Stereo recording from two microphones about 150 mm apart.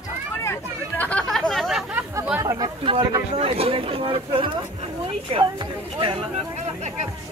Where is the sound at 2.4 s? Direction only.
25° right (ahead or behind).